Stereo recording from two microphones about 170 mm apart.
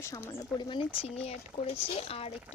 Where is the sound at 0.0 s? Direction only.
20° left (ahead or behind).